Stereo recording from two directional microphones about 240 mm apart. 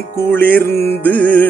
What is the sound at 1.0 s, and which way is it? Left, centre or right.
Music, centre.